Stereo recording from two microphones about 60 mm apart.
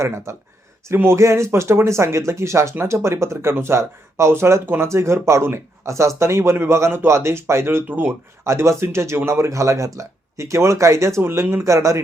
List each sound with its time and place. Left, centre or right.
0.0 s speech: right
0.9 s speech: right
8.4 s speech: right